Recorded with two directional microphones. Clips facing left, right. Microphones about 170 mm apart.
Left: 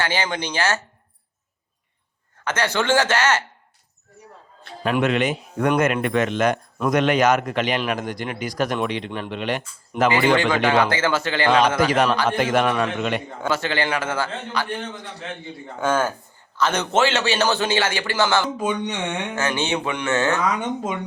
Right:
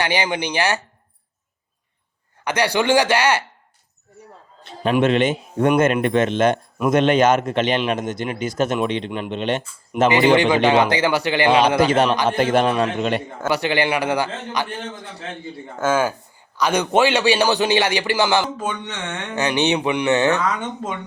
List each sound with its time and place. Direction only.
0.0 s a man's voice: 15° right (ahead or behind)
2.4 s a man's voice: 15° right (ahead or behind)
4.6 s a man's voice: 25° right (ahead or behind)
12.4 s a man's voice: 30° right (ahead or behind)
13.5 s a man's voice: 15° right (ahead or behind)
15.8 s a man's voice: 10° right (ahead or behind)
18.5 s speech: 15° left (ahead or behind)
19.4 s a man's voice: 15° right (ahead or behind)